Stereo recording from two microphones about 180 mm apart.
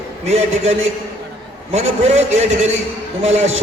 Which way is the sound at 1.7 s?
40° right (ahead or behind).